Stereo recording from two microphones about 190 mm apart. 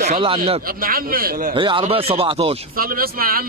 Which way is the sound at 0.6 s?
50° right (ahead or behind).